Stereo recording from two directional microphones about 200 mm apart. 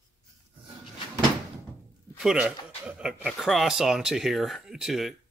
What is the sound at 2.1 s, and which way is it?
A man's voice, 5° right (ahead or behind).